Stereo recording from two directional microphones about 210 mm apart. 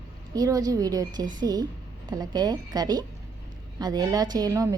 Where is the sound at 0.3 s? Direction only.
15° right (ahead or behind).